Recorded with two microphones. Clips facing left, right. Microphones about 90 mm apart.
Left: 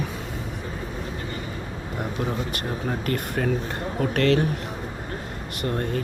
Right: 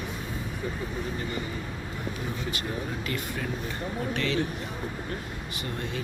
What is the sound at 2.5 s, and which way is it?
Speech, 50° left (ahead or behind).